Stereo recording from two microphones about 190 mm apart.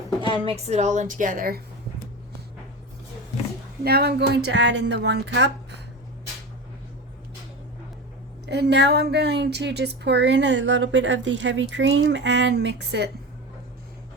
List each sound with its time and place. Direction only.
0.4 s a woman's voice: 35° right (ahead or behind); by 1.6 s 50° right (ahead or behind)
3.8 s speech: 55° right (ahead or behind)
8.4 s a woman's voice: 65° right (ahead or behind)